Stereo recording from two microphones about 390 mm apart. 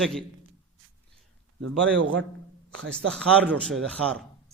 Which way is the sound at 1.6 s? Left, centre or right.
Right.